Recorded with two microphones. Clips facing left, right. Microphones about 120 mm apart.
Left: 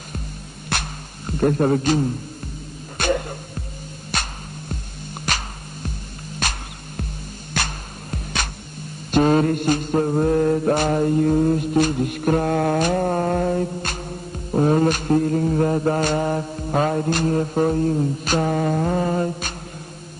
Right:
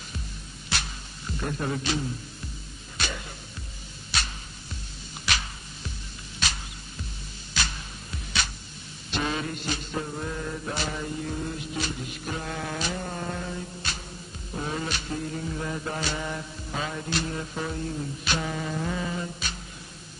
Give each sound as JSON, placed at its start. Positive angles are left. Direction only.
{"t": 0.7, "sound": "music", "side_deg": 50}
{"t": 9.1, "sound": "mantra", "side_deg": 50}